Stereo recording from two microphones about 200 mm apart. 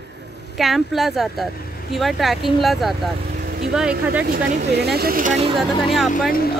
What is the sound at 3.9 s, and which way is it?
Speech, 50° right (ahead or behind).